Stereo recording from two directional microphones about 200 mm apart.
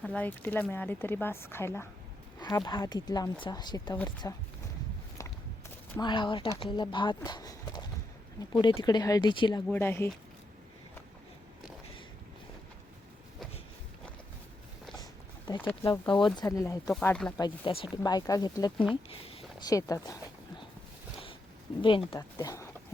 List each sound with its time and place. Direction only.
0.0 s speech: 5° left (ahead or behind)
6.0 s speech: 25° left (ahead or behind)
9.6 s speech: 10° left (ahead or behind)
15.5 s speech: 10° left (ahead or behind)
15.9 s speech: 25° left (ahead or behind)
16.8 s speech: 5° left (ahead or behind)
17.9 s speech: 20° left (ahead or behind)
21.8 s speech: 25° left (ahead or behind)